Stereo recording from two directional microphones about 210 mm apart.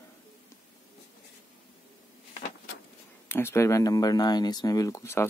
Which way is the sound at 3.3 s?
10° left (ahead or behind).